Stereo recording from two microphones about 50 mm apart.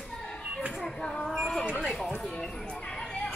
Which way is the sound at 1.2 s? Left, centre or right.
Centre.